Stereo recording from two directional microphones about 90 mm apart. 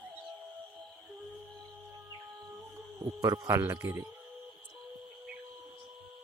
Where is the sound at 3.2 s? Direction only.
40° right (ahead or behind).